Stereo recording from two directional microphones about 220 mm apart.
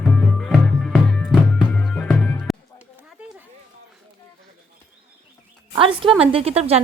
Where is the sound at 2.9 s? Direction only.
5° right (ahead or behind).